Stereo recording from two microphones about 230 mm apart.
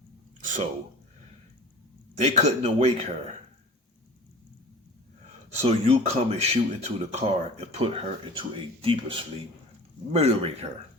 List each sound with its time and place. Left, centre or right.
0.4 s a sound: right
2.1 s speech: right
5.6 s speech: right